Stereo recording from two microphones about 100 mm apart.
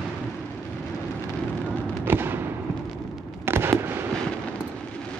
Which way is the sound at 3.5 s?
25° right (ahead or behind).